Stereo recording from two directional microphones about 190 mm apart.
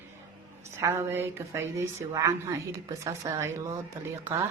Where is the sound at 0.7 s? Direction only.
15° right (ahead or behind).